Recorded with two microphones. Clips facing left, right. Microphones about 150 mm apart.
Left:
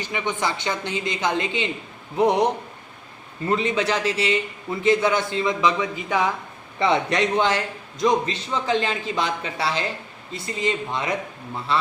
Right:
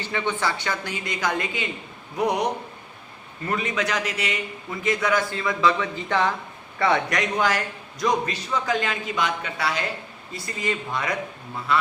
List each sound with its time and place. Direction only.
0.0 s a man's voice: 15° left (ahead or behind)
6.7 s a man's voice: 20° left (ahead or behind)